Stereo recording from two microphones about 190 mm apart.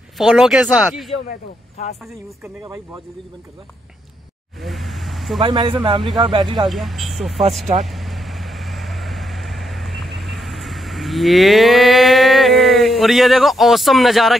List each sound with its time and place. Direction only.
0.2 s speech: 5° right (ahead or behind)
2.4 s speech: 15° right (ahead or behind)
4.6 s vehicle: centre (ahead or behind)
5.4 s speech: 25° right (ahead or behind)
6.7 s speech: centre (ahead or behind)
7.8 s vehicle: centre (ahead or behind)